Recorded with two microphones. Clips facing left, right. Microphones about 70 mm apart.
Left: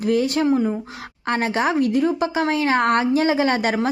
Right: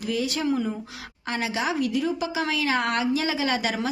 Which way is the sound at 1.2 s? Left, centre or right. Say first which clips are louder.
Left 6 dB; left.